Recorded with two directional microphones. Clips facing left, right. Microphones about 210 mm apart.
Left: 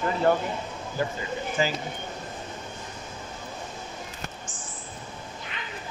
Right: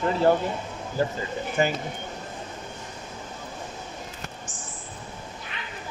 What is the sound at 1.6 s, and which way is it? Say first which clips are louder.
Speech: right 3 dB; 60° right (ahead or behind).